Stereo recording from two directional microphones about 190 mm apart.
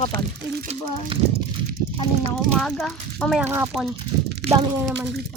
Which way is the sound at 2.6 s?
5° left (ahead or behind).